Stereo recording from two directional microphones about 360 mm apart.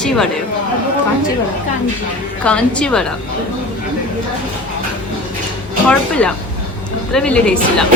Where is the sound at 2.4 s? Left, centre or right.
Centre.